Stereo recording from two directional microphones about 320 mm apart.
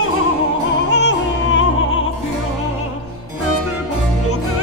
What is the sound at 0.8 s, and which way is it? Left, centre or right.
Music, left.